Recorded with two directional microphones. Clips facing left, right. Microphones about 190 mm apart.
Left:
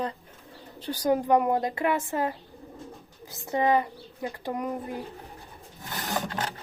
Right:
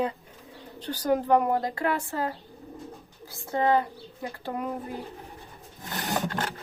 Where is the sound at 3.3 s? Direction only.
20° left (ahead or behind).